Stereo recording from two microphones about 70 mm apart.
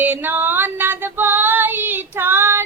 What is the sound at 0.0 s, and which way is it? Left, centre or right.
Female singing, right.